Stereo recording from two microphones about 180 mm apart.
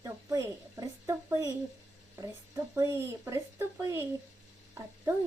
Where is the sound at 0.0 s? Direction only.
15° right (ahead or behind).